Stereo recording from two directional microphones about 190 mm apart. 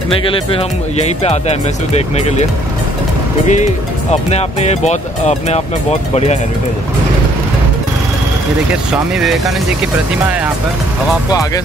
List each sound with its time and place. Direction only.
0.3 s speech: 30° left (ahead or behind)
3.4 s speech: 40° left (ahead or behind)